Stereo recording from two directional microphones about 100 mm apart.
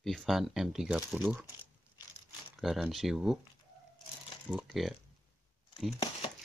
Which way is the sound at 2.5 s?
Centre (ahead or behind).